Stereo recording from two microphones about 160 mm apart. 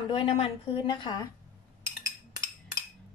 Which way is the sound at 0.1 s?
35° left (ahead or behind).